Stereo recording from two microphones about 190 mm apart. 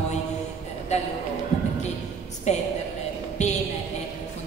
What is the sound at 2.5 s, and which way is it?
A woman's voice, 35° left (ahead or behind).